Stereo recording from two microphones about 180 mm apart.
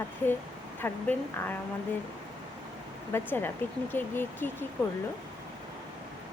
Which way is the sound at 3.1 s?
10° left (ahead or behind).